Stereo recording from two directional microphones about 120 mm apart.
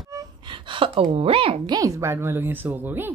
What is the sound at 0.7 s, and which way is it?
Speech, 45° right (ahead or behind).